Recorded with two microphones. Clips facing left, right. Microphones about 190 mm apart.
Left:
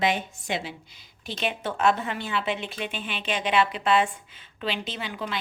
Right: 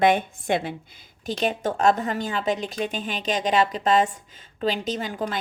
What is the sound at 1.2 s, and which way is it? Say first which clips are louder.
A woman's voice: right 5 dB; 40° right (ahead or behind).